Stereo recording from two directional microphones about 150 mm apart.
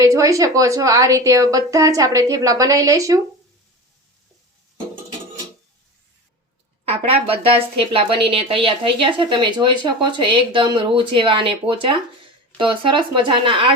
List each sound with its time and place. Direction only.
0.0 s a woman's voice: 25° right (ahead or behind)
6.8 s a woman's voice: 40° right (ahead or behind)